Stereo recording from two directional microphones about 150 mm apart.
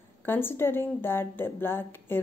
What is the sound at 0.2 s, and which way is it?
A woman's voice, 15° left (ahead or behind).